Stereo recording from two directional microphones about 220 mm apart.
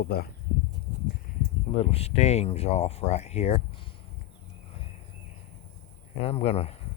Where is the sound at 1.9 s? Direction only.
30° left (ahead or behind).